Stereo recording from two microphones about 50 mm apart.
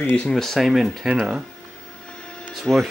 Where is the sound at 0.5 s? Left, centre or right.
Centre.